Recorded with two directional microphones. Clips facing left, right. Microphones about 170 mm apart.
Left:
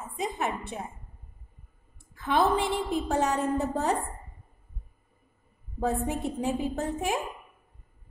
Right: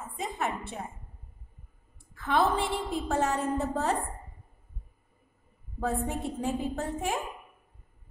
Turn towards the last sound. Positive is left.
turn(degrees=15)  # may be behind; listen again after turning